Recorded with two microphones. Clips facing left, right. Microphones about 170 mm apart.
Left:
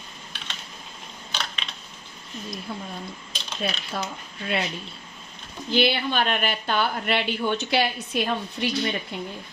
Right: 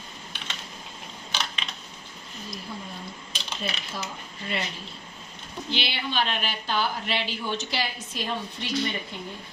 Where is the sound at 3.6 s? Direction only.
65° left (ahead or behind).